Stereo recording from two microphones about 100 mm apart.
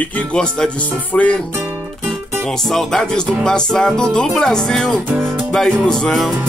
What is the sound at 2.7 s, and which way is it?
Speech, 5° left (ahead or behind).